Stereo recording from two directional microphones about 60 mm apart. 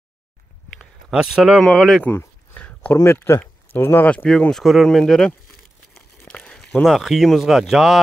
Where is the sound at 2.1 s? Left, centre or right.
Left.